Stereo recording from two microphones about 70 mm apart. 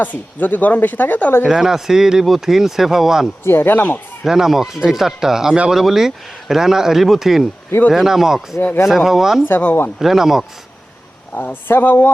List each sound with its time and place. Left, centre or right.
0.0 s speech: left
1.5 s speech: centre
3.4 s speech: left
4.2 s speech: centre
9.4 s speech: left
10.0 s speech: centre
11.3 s speech: left